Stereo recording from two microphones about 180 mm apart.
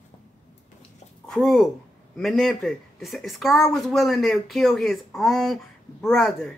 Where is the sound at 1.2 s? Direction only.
Centre (ahead or behind).